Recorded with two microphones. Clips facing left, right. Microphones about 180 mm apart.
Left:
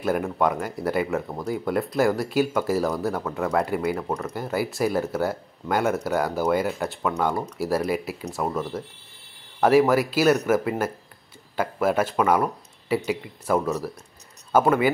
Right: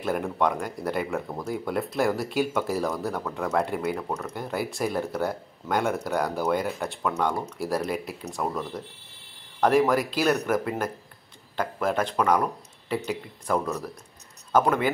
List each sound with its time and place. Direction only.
0.0 s speech: 5° left (ahead or behind)